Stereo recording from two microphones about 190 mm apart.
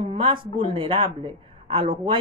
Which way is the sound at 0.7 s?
25° right (ahead or behind).